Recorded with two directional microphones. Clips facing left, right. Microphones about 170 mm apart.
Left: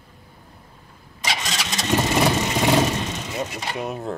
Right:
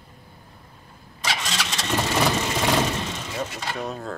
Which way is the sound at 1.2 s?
15° left (ahead or behind).